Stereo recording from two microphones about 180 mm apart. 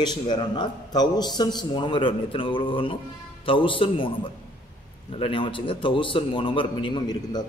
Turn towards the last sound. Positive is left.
turn(degrees=25)  # may be behind; listen again after turning